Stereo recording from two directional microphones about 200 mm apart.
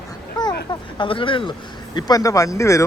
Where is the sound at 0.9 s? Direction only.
25° left (ahead or behind).